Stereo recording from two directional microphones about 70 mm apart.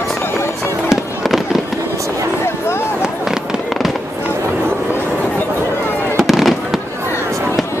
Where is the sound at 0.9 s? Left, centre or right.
Centre.